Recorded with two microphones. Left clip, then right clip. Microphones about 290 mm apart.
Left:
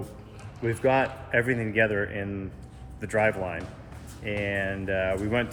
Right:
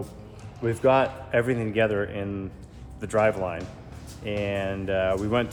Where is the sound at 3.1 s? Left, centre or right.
Centre.